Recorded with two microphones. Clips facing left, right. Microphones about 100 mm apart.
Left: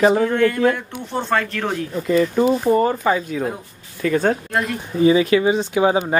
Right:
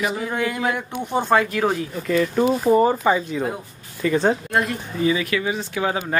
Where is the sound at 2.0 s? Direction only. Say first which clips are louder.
Left 2 dB; 5° left (ahead or behind).